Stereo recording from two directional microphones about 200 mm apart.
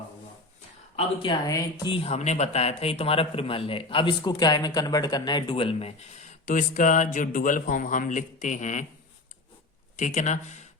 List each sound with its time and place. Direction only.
0.9 s speech: 25° left (ahead or behind)
10.0 s speech: 40° left (ahead or behind)